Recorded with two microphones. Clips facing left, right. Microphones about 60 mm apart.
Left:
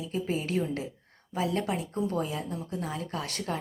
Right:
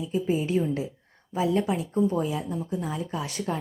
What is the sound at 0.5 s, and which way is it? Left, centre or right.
Speech, centre.